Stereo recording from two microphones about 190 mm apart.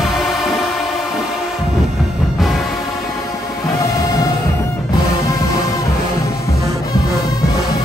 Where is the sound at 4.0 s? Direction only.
20° left (ahead or behind).